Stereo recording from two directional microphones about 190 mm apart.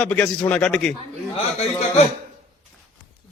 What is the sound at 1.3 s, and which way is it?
Speech, 30° left (ahead or behind).